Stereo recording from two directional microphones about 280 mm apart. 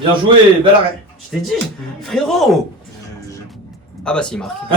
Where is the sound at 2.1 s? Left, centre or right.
Centre.